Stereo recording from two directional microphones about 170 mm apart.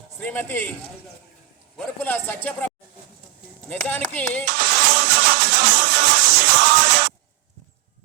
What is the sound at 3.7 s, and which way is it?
Speech, 10° left (ahead or behind).